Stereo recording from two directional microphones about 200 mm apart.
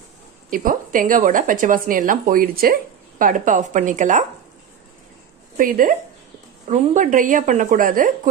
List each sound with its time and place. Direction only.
0.5 s speech: 40° right (ahead or behind)
5.6 s speech: 45° right (ahead or behind)